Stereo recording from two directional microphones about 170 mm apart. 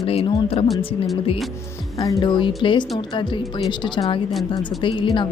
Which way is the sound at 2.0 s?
20° left (ahead or behind).